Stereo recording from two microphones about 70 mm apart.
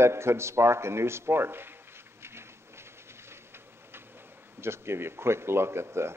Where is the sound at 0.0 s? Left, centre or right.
Right.